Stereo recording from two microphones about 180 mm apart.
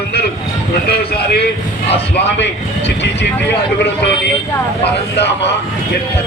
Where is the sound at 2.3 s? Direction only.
80° left.